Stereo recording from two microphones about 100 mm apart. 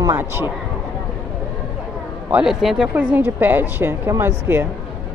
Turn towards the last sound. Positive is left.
turn(degrees=-25)  # may be behind; listen again after turning